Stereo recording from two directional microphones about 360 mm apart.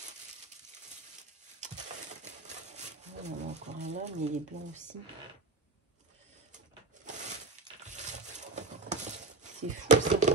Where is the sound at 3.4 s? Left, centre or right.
Centre.